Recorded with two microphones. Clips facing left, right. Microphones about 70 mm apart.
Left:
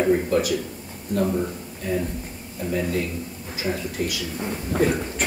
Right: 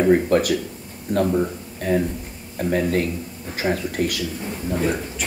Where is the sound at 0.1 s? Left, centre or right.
Right.